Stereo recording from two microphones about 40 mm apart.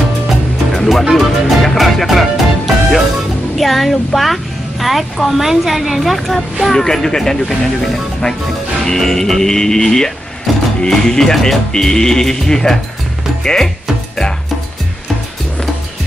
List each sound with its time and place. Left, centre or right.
0.7 s music: centre
3.5 s a woman's voice: centre